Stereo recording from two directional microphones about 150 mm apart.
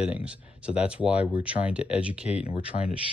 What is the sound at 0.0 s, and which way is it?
Speech, 10° right (ahead or behind).